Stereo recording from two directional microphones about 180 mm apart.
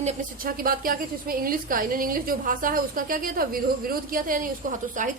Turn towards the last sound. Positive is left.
turn(degrees=-45)  # may be behind; listen again after turning